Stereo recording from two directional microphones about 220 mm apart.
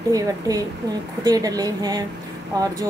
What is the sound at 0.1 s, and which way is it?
A woman's voice, 15° right (ahead or behind).